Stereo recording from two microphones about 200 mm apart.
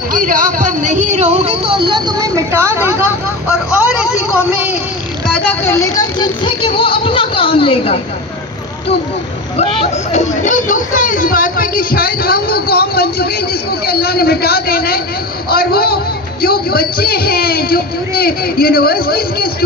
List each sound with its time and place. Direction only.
0.1 s music: 40° right (ahead or behind); by 4.4 s 5° right (ahead or behind)
4.5 s a sound: 5° right (ahead or behind)
5.5 s speech: 10° left (ahead or behind); by 8.0 s 30° left (ahead or behind)
9.6 s speech: 35° left (ahead or behind); by 19.5 s 50° left (ahead or behind)